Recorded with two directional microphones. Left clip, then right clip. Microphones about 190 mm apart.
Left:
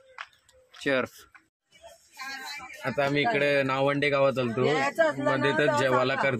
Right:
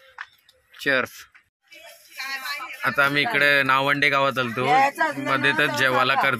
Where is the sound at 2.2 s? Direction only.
50° left (ahead or behind).